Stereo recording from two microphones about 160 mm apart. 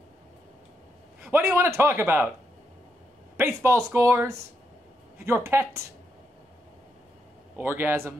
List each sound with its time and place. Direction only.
1.2 s a man's voice: 15° right (ahead or behind)
3.3 s a man's voice: 15° right (ahead or behind)
7.5 s a man's voice: 10° right (ahead or behind)